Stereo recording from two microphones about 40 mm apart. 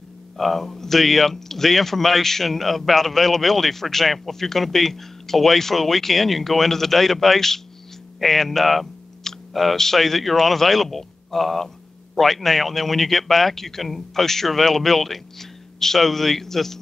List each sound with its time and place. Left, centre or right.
0.4 s speech: centre